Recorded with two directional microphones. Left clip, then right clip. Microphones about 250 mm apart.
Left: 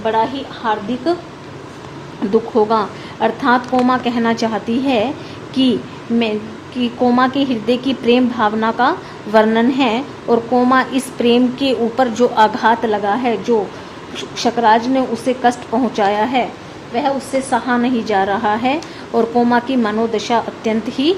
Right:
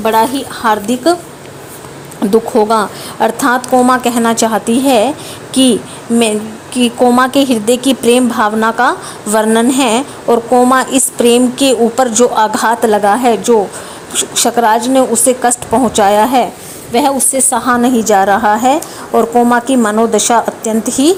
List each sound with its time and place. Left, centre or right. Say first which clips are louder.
0.0 s a woman's voice: right 6 dB; right
2.3 s a woman's voice: right 4 dB; right
6.7 s a woman's voice: right 6 dB; right